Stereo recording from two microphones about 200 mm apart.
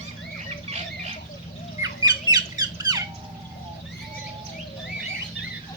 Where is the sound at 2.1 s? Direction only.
20° right (ahead or behind).